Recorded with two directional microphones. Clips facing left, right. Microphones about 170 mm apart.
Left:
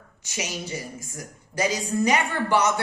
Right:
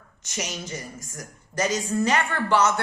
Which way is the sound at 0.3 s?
10° left (ahead or behind).